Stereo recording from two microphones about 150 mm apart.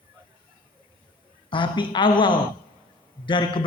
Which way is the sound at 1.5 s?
35° left (ahead or behind).